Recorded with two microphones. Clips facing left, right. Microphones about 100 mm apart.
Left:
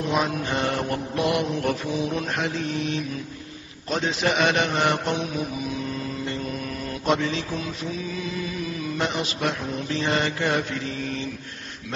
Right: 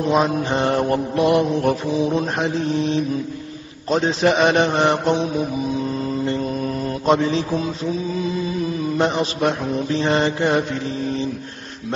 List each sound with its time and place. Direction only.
0.0 s mantra: 30° right (ahead or behind)
8.2 s music: 30° right (ahead or behind)
9.0 s mantra: 35° right (ahead or behind)